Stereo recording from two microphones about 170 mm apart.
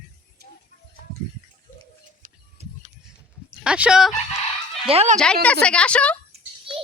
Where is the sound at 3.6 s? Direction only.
5° right (ahead or behind).